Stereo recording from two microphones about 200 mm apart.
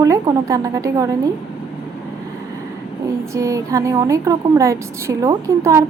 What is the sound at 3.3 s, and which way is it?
Speech, 15° right (ahead or behind).